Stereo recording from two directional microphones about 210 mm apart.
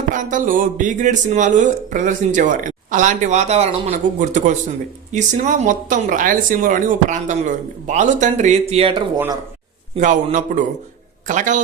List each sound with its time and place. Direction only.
0.1 s speech: 40° right (ahead or behind)
9.1 s speech: 10° right (ahead or behind)
10.0 s speech: 35° right (ahead or behind)